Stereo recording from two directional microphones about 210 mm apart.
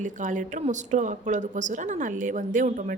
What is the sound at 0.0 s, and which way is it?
A woman's voice, 35° right (ahead or behind).